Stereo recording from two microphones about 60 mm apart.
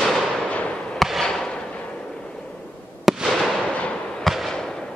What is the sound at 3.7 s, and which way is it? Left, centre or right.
Fireworks, centre.